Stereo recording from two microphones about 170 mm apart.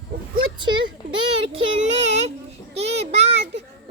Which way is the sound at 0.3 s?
30° right (ahead or behind).